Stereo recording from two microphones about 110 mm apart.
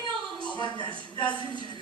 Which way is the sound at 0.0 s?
45° left (ahead or behind).